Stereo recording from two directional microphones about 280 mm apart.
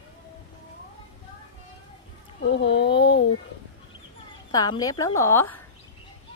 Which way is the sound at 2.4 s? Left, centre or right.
Left.